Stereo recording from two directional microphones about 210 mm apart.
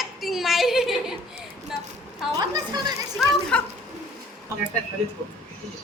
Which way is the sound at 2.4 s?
20° right (ahead or behind).